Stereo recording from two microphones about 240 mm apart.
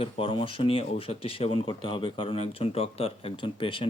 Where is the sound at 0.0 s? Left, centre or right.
Left.